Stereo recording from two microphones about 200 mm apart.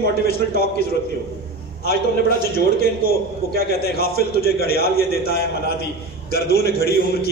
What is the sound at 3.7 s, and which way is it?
A man's voice, 50° left (ahead or behind).